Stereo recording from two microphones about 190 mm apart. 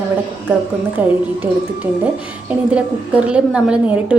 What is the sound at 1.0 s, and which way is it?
A woman's voice, 10° right (ahead or behind).